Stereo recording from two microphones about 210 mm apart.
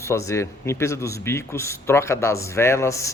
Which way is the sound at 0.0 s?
15° left (ahead or behind).